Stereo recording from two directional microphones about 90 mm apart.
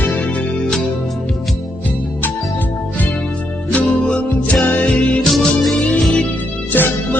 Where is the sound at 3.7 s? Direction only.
15° left (ahead or behind).